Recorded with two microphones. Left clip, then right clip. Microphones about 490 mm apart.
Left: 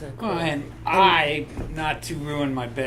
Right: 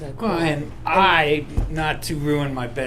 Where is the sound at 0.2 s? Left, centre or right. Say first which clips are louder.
Right 4 dB; right.